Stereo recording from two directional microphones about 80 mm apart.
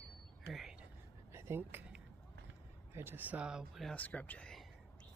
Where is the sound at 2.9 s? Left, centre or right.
Right; by 3.7 s centre.